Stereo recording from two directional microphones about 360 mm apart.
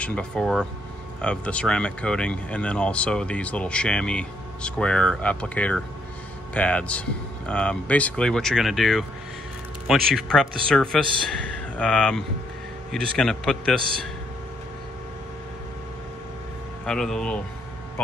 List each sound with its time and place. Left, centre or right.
0.0 s speech: centre
16.8 s speech: centre